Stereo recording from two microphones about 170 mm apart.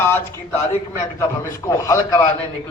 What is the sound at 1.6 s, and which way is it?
Speech, 20° left (ahead or behind).